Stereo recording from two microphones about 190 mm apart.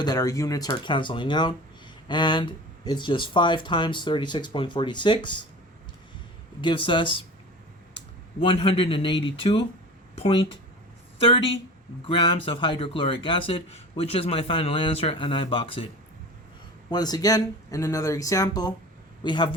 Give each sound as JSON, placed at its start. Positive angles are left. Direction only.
{"t": 0.0, "sound": "speech", "side_deg": 20}
{"t": 6.6, "sound": "speech", "side_deg": 25}
{"t": 8.4, "sound": "speech", "side_deg": 25}
{"t": 16.9, "sound": "speech", "side_deg": 20}